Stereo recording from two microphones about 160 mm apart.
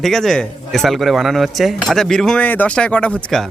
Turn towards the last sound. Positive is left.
turn(degrees=5)  # may be behind; listen again after turning